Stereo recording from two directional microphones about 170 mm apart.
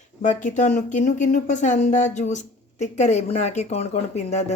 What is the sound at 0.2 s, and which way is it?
Speech, 45° left (ahead or behind).